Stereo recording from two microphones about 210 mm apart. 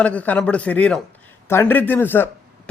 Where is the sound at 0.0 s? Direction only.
5° left (ahead or behind).